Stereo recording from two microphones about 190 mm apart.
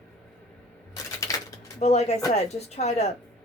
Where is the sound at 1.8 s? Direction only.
35° left (ahead or behind).